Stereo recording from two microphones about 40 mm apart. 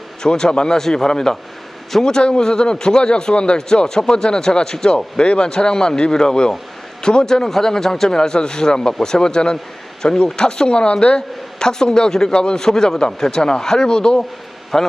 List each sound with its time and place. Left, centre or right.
0.2 s a man's voice: centre
14.7 s a man's voice: centre